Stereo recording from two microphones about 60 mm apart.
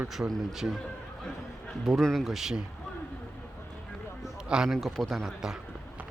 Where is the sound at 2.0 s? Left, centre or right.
Centre.